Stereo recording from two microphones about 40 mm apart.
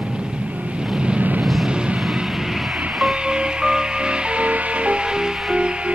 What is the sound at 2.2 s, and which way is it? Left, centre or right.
Vehicle, centre.